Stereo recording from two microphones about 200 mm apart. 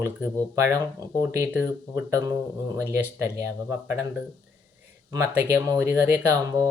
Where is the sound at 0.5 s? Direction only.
15° right (ahead or behind).